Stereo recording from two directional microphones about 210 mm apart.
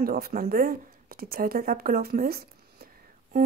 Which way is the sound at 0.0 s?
45° right (ahead or behind).